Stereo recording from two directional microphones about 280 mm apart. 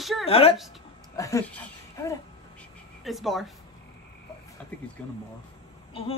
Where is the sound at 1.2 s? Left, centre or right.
Centre.